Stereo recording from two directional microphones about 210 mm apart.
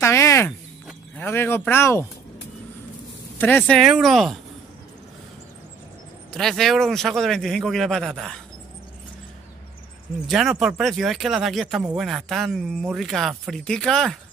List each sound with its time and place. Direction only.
0.0 s a sound: 10° left (ahead or behind)
3.3 s speech: 10° left (ahead or behind)
6.3 s speech: centre (ahead or behind)
10.2 s speech: centre (ahead or behind)